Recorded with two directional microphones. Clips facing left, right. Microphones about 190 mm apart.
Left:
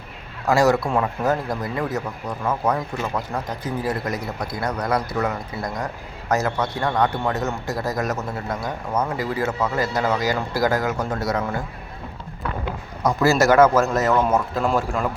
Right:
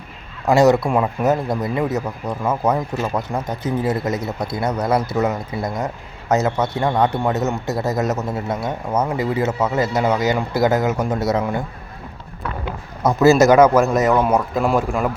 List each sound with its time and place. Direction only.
0.4 s a man's voice: 20° right (ahead or behind)
13.1 s speech: 20° right (ahead or behind)